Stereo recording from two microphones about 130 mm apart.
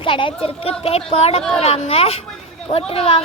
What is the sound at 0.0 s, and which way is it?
A child's voice, 40° left (ahead or behind).